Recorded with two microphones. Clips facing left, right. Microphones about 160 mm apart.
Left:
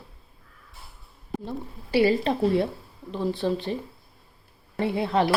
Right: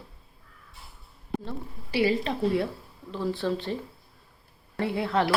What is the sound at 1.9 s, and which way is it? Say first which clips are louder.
Speech: left 4 dB; 35° left (ahead or behind).